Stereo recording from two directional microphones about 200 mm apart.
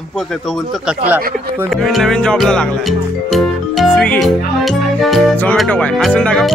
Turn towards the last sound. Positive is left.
turn(degrees=5)  # may be behind; listen again after turning